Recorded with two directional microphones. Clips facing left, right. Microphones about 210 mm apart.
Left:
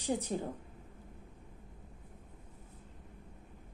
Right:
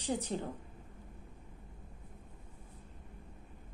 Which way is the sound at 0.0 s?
10° left (ahead or behind).